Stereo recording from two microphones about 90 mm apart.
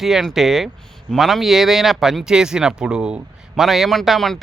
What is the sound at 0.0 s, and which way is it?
A man's voice, 5° right (ahead or behind).